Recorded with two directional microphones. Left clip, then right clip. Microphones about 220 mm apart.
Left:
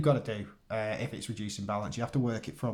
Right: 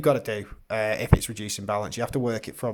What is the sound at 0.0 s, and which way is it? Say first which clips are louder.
Speech: right 6 dB; 45° right (ahead or behind).